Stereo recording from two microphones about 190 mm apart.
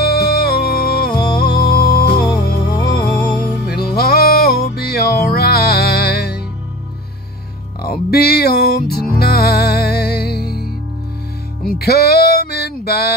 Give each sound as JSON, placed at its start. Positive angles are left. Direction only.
{"t": 0.0, "sound": "music", "side_deg": 55}
{"t": 2.7, "sound": "music", "side_deg": 20}
{"t": 3.6, "sound": "music", "side_deg": 55}
{"t": 7.8, "sound": "music", "side_deg": 55}